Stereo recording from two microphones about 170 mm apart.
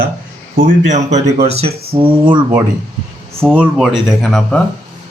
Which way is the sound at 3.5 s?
5° right (ahead or behind).